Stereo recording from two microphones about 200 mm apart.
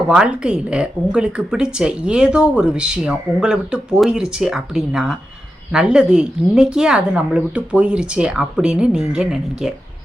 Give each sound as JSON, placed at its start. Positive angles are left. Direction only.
{"t": 0.1, "sound": "speech", "side_deg": -5}